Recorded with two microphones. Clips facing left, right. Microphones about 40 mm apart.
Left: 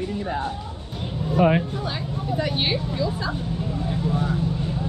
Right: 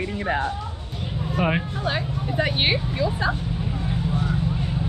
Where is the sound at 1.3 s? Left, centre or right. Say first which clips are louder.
Left 5 dB; centre.